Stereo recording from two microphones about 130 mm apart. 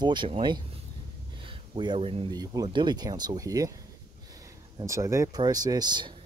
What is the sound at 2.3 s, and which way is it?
A man's voice, 30° right (ahead or behind).